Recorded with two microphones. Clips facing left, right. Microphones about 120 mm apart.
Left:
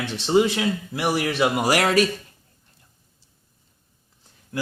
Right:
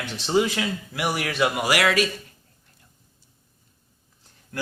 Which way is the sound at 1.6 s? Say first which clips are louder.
Left 3 dB; 40° left (ahead or behind).